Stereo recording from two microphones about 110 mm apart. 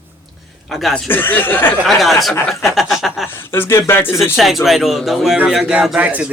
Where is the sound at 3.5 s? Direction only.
20° left (ahead or behind).